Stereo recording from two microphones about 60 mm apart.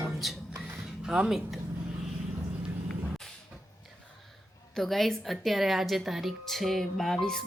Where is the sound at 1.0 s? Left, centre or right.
Centre.